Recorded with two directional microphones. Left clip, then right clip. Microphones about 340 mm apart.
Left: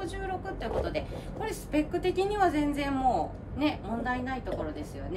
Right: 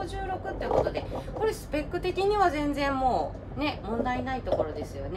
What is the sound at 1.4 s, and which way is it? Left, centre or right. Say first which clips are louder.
A woman's voice: right 1 dB; centre.